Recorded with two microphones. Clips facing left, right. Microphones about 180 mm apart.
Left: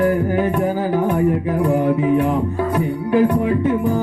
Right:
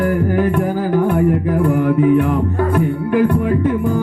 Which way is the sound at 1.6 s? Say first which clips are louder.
Right 3 dB; 55° right (ahead or behind).